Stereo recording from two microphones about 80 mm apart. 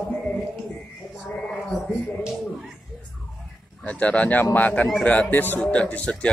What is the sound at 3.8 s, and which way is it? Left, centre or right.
Speech, centre.